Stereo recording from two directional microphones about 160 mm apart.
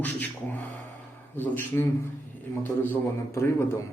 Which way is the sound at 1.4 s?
15° left (ahead or behind).